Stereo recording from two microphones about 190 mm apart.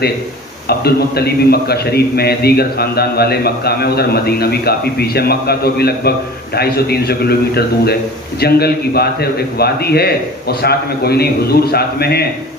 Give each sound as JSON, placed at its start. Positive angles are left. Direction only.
{"t": 0.7, "sound": "a man's voice", "side_deg": 55}